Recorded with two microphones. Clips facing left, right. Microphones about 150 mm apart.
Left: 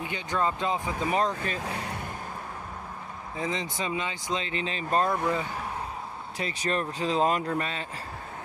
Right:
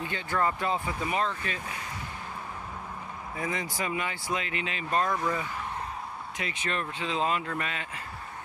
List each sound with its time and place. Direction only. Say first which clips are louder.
0.0 s speech: even; 15° left (ahead or behind)
1.1 s speech: left 4 dB; 40° left (ahead or behind)
3.3 s speech: left 2 dB; 20° left (ahead or behind)
6.3 s speech: left 5 dB; 35° left (ahead or behind)